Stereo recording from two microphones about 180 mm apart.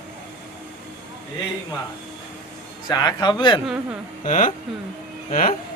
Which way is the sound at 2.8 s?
20° left (ahead or behind).